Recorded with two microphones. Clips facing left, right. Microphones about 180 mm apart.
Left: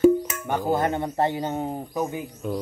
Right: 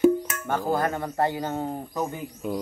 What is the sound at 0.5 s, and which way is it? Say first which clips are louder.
Speech: left 2 dB; 20° left (ahead or behind).